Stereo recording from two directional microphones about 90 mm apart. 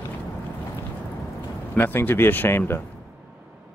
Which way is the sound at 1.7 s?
20° left (ahead or behind).